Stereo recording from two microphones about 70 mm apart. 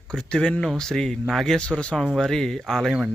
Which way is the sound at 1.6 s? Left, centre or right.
Centre.